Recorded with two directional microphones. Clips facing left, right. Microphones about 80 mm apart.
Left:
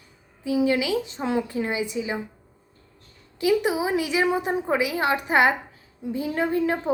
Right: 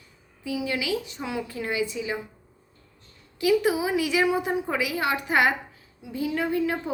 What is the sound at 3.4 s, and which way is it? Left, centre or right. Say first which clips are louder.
A woman's voice: even; left.